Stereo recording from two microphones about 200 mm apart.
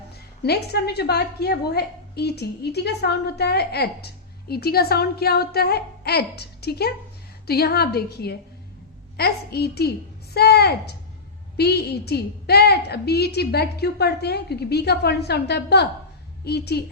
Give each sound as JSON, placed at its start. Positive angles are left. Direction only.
{"t": 0.4, "sound": "a woman's voice", "side_deg": 55}